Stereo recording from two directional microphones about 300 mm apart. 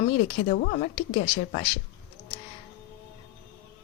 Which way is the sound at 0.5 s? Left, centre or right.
Left.